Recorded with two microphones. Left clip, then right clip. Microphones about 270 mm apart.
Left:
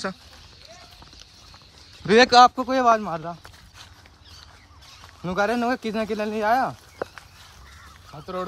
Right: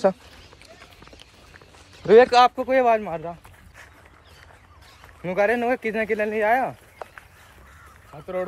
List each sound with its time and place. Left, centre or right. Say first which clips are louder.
2.0 s speech: right 3 dB; centre
2.3 s speech: left 1 dB; left
5.2 s speech: right 2 dB; centre